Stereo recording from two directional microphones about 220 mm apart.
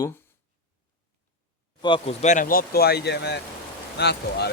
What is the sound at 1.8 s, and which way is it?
Speech, 25° left (ahead or behind).